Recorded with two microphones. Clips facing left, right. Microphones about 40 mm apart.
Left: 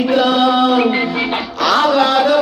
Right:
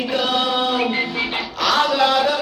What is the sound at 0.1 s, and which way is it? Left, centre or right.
Chant, left.